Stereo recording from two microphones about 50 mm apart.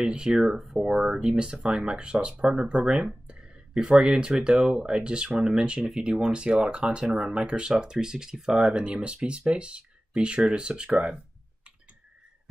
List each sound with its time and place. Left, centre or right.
0.0 s speech: centre